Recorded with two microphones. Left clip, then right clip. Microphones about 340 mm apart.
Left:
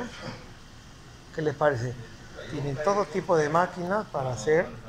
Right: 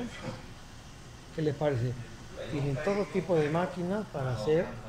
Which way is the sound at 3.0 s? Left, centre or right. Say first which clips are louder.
Left 4 dB; left.